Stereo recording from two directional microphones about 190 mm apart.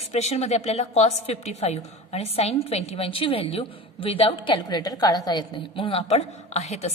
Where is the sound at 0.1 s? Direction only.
35° left (ahead or behind).